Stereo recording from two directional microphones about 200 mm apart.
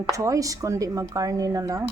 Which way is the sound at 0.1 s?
15° right (ahead or behind).